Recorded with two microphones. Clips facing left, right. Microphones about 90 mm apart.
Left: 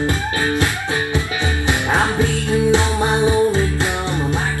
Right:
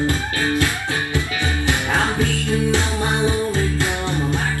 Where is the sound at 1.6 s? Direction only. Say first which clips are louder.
Left 3 dB; 20° left (ahead or behind).